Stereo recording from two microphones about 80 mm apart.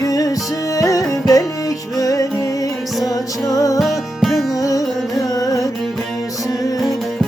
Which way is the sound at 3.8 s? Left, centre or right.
Centre.